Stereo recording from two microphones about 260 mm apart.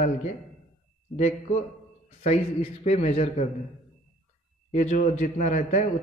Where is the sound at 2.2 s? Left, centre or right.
Left.